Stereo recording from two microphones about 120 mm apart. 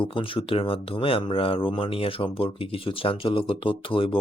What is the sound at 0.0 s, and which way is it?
Speech, 45° left (ahead or behind).